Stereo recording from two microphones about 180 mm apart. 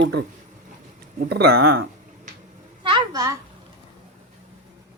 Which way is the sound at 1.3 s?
60° right (ahead or behind).